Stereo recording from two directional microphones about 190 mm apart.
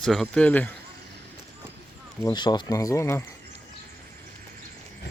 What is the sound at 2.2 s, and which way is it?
Speech, 20° left (ahead or behind).